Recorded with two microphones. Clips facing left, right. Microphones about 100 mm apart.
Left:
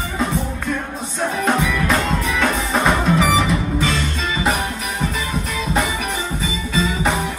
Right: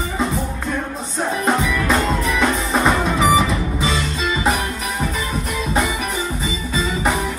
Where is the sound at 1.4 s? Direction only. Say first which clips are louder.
Even; centre (ahead or behind).